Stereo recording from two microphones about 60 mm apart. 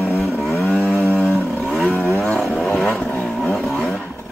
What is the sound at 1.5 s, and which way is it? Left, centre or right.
Vehicle, centre.